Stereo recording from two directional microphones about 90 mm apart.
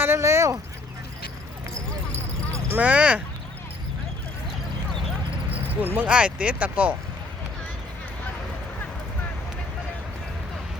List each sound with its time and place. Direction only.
0.0 s a sound: 30° right (ahead or behind)
2.7 s speech: 15° right (ahead or behind)
5.8 s speech: 20° right (ahead or behind)